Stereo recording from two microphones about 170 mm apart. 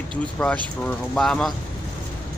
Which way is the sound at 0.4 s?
15° left (ahead or behind).